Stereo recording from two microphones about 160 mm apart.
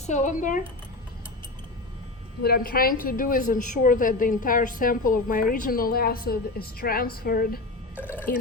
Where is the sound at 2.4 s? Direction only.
70° left (ahead or behind).